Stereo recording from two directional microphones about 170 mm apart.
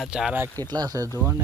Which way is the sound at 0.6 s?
25° right (ahead or behind).